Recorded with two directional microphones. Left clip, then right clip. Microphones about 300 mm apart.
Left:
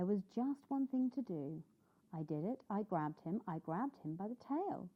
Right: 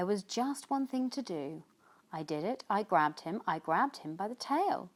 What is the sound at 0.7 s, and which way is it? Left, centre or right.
Speech, centre.